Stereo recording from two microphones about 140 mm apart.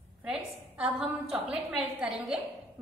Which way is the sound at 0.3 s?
5° right (ahead or behind).